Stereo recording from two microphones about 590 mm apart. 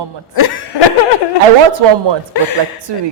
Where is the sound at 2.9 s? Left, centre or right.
Right.